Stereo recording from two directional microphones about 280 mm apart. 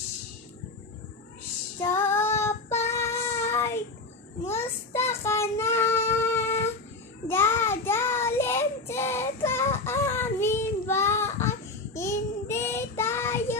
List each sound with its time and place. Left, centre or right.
1.8 s child singing: centre